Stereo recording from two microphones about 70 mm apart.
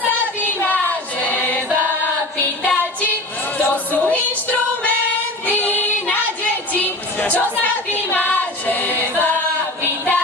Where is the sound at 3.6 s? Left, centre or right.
Left.